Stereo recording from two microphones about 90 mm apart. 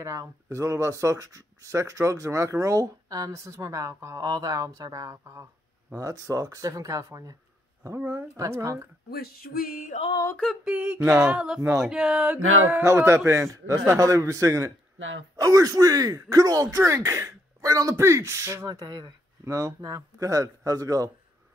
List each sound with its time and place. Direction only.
0.0 s speech: 35° right (ahead or behind)
10.6 s a sound: 10° right (ahead or behind)
12.6 s speech: 30° right (ahead or behind)
18.7 s speech: 50° right (ahead or behind)
19.4 s speech: 35° right (ahead or behind)